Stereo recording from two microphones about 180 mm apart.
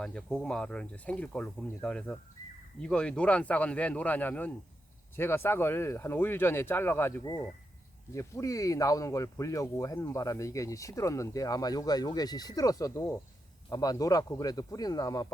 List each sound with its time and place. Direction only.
0.0 s speech: centre (ahead or behind); by 15.3 s 20° left (ahead or behind)